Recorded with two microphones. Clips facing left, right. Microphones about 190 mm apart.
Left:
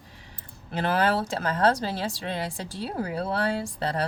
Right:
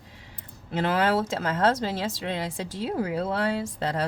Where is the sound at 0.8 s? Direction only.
20° right (ahead or behind).